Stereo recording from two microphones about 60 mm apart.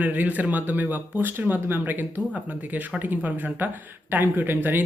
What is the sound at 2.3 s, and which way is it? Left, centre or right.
Speech, centre.